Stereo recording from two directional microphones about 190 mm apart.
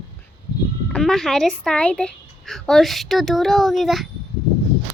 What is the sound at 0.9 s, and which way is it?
A woman's voice, centre (ahead or behind).